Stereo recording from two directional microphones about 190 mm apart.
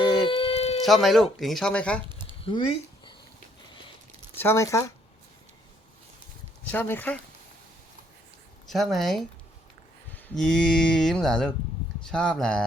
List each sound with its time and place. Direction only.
0.3 s a sound: 30° left (ahead or behind)
0.9 s speech: centre (ahead or behind)
2.4 s a sound: 30° left (ahead or behind)
4.4 s speech: 15° left (ahead or behind)
6.7 s speech: 10° left (ahead or behind)
8.6 s speech: centre (ahead or behind)